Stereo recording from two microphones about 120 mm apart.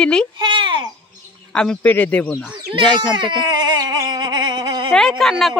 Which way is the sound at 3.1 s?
40° right (ahead or behind).